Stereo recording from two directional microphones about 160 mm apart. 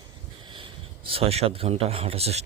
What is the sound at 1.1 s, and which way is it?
Speech, 40° right (ahead or behind).